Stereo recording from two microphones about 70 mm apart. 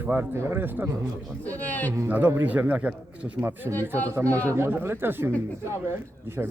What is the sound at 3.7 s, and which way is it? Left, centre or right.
Speech, left.